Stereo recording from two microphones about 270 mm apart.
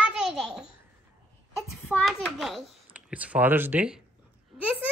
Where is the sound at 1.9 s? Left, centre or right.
Centre.